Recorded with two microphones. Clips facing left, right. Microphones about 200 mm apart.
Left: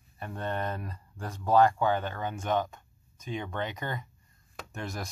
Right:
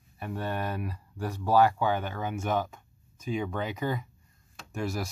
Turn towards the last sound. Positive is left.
turn(degrees=-5)  # may be behind; listen again after turning